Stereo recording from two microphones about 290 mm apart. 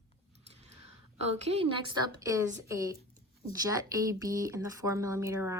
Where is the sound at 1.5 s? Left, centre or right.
Centre.